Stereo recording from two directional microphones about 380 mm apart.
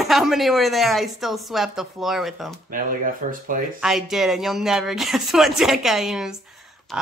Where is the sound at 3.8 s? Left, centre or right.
Centre.